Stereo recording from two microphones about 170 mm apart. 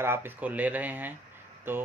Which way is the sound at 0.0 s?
15° right (ahead or behind).